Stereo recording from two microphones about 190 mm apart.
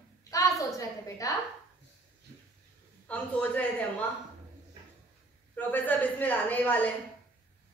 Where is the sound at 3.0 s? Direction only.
5° left (ahead or behind).